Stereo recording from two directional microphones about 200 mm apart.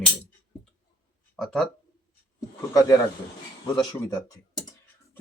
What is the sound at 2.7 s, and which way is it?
Speech, 15° left (ahead or behind).